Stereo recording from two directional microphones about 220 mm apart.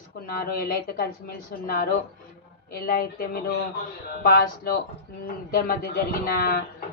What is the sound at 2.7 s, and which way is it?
Speech, 45° left (ahead or behind).